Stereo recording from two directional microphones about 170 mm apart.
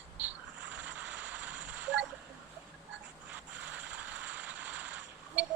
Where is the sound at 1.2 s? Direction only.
5° right (ahead or behind).